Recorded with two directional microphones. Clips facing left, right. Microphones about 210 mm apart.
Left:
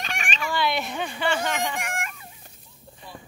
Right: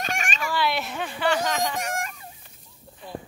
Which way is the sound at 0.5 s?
Centre (ahead or behind).